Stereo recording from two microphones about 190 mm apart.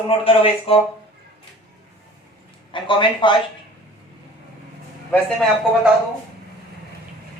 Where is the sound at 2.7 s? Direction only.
25° left (ahead or behind).